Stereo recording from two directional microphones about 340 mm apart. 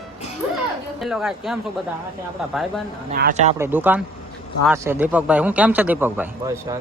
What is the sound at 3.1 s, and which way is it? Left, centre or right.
Speech, right.